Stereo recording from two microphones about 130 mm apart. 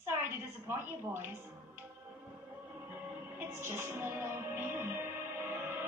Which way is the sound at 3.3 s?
15° right (ahead or behind).